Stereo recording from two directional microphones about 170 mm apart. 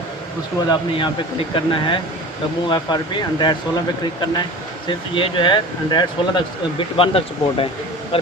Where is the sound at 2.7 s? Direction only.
25° left (ahead or behind).